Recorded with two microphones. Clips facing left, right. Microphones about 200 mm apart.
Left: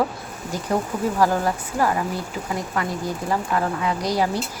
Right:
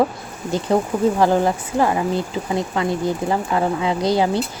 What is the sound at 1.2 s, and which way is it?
Speech, 25° right (ahead or behind).